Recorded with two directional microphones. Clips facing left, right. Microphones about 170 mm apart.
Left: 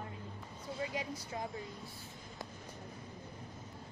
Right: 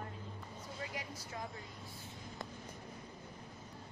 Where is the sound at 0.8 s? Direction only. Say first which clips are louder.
Left 7 dB; 25° left (ahead or behind).